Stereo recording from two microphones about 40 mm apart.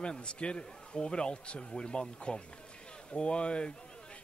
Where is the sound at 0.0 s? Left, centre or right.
Left.